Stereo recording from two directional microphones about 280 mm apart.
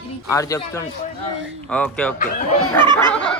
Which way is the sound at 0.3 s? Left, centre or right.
Centre.